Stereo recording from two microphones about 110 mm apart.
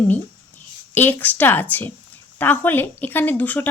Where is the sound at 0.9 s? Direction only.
15° left (ahead or behind).